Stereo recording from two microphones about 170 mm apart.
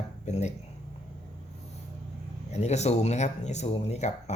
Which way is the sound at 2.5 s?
40° left (ahead or behind).